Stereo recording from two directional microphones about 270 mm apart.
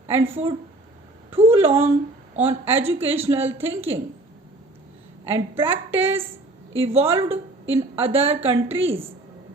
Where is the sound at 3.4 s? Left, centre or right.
Centre.